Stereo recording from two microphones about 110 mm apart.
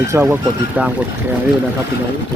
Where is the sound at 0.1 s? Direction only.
20° right (ahead or behind).